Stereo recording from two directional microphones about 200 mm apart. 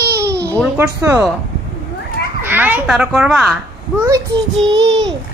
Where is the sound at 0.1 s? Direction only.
55° right (ahead or behind).